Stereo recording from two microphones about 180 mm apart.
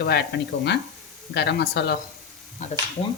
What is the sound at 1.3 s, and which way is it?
Speech, 65° left (ahead or behind).